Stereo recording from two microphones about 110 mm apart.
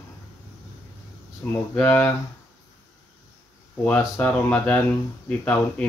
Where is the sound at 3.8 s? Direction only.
15° left (ahead or behind).